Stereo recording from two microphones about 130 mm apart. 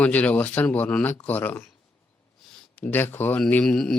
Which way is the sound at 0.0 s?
10° left (ahead or behind).